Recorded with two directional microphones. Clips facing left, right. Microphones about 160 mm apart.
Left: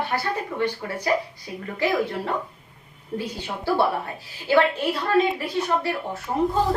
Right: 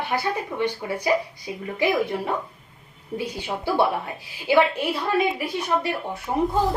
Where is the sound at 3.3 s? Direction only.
15° right (ahead or behind).